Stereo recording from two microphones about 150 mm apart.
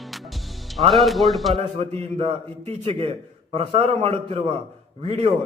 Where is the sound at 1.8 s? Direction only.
45° right (ahead or behind).